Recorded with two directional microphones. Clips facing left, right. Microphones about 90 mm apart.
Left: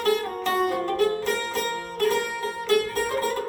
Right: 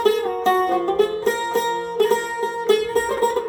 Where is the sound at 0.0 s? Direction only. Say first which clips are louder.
Right 6 dB; 30° right (ahead or behind).